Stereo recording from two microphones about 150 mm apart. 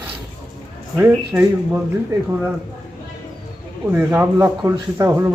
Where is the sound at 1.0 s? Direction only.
10° right (ahead or behind).